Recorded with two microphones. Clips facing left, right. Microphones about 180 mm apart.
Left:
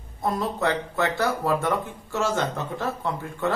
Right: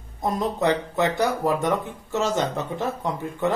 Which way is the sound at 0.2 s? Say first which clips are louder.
Right 2 dB; 20° right (ahead or behind).